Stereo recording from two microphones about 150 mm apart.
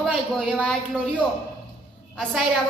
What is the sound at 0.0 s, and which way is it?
Speech, centre (ahead or behind).